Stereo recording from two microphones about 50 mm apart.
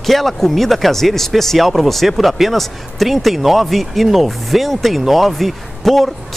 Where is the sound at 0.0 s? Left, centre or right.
Centre.